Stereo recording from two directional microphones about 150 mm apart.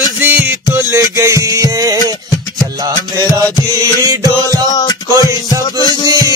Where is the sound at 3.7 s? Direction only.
25° right (ahead or behind).